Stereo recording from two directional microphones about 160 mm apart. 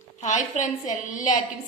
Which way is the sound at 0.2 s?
50° left (ahead or behind).